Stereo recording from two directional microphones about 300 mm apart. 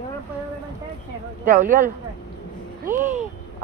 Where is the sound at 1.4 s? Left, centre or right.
Right.